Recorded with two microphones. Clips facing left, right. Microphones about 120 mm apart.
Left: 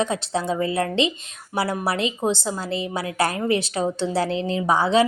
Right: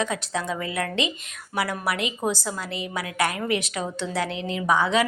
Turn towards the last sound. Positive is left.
turn(degrees=30)  # may be behind; listen again after turning